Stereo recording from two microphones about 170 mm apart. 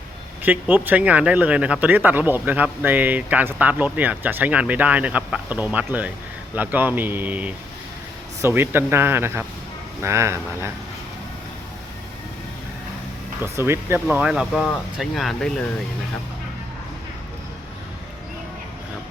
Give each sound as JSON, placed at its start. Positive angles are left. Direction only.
{"t": 0.4, "sound": "speech", "side_deg": -10}
{"t": 13.4, "sound": "speech", "side_deg": -15}